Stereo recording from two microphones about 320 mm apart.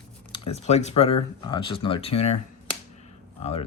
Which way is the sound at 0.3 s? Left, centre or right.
Centre.